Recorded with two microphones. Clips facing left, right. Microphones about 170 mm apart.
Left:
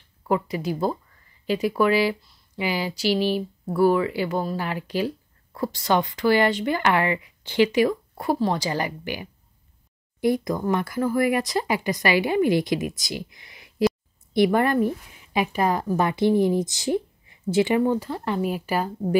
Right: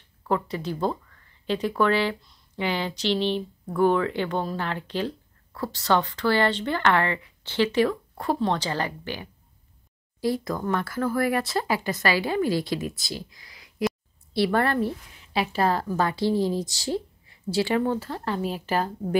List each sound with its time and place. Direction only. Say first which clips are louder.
0.3 s speech: left 2 dB; 10° left (ahead or behind); by 13.9 s 25° left (ahead or behind)
14.3 s a woman's voice: left 3 dB; 15° left (ahead or behind)